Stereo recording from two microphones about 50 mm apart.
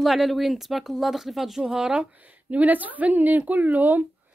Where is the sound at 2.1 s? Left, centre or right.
Right.